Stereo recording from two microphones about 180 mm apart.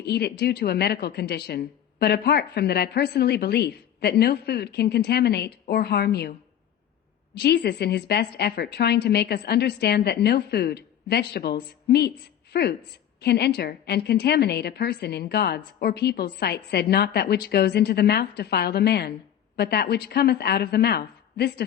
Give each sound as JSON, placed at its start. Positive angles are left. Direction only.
{"t": 0.0, "sound": "speech", "side_deg": 65}
{"t": 7.3, "sound": "a woman's voice", "side_deg": 70}